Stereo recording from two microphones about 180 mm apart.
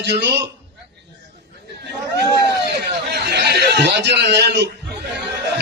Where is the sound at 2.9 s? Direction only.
65° right (ahead or behind).